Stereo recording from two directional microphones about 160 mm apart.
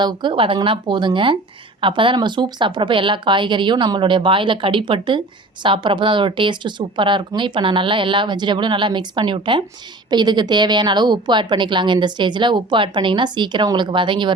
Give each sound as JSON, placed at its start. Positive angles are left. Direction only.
{"t": 0.0, "sound": "a woman's voice", "side_deg": -30}